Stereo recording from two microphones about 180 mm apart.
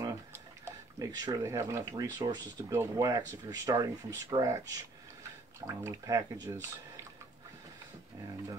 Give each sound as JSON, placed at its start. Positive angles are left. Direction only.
{"t": 0.0, "sound": "speech", "side_deg": -15}
{"t": 5.7, "sound": "speech", "side_deg": -20}